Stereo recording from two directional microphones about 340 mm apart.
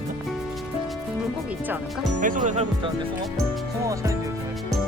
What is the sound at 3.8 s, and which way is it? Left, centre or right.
Music, centre.